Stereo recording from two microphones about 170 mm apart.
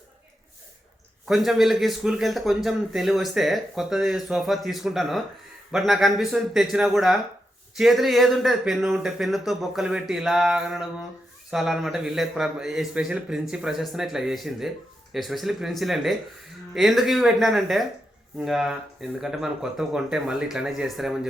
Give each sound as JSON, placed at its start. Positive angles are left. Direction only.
{"t": 1.3, "sound": "speech", "side_deg": 0}